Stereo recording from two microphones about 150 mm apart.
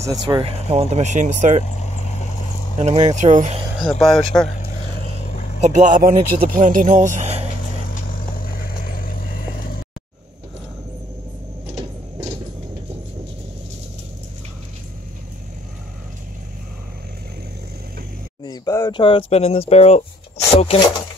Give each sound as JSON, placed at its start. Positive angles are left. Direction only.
{"t": 0.0, "sound": "speech", "side_deg": -25}
{"t": 0.4, "sound": "speech", "side_deg": -40}
{"t": 1.6, "sound": "vehicle", "side_deg": 50}
{"t": 2.8, "sound": "speech", "side_deg": -50}
{"t": 4.0, "sound": "speech", "side_deg": 0}
{"t": 5.2, "sound": "vehicle", "side_deg": 50}
{"t": 5.6, "sound": "speech", "side_deg": -55}
{"t": 7.9, "sound": "vehicle", "side_deg": 70}
{"t": 18.4, "sound": "a sound", "side_deg": 25}
{"t": 19.7, "sound": "speech", "side_deg": 45}